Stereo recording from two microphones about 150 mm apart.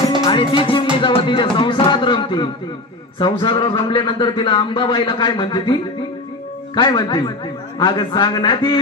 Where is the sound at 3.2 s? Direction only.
35° left (ahead or behind).